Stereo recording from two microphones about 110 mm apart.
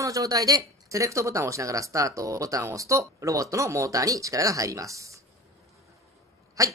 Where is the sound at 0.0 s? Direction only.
30° right (ahead or behind).